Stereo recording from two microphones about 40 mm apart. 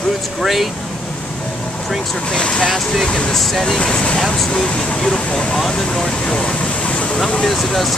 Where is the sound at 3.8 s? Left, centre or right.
Left.